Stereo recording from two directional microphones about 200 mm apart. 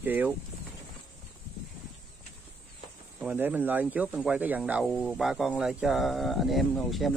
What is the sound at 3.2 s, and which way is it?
Speech, 10° right (ahead or behind).